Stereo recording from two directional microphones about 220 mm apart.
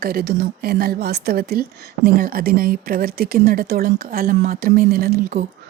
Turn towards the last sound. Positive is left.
turn(degrees=-40)  # may be behind; listen again after turning